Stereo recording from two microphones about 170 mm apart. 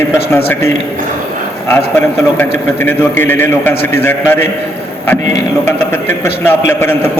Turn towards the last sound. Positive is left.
turn(degrees=15)  # may be behind; listen again after turning